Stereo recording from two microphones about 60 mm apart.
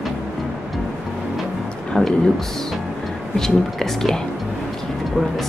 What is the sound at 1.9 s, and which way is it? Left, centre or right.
Speech, centre.